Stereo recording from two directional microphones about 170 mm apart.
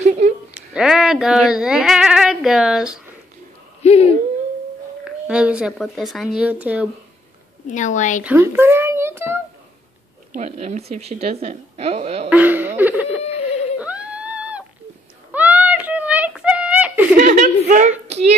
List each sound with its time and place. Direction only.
0.2 s a sound: 40° right (ahead or behind)
0.6 s speech: 5° right (ahead or behind)
3.8 s a sound: 40° left (ahead or behind)
5.0 s speech: 5° right (ahead or behind)
7.7 s speech: 45° left (ahead or behind)
8.2 s a child's voice: 10° right (ahead or behind)
10.3 s speech: 40° right (ahead or behind)
12.3 s laughter: 10° right (ahead or behind)
13.2 s a sound: 40° left (ahead or behind)
13.7 s a sound: 10° right (ahead or behind)
17.2 s chuckle: 45° right (ahead or behind)
18.0 s hands: 40° right (ahead or behind)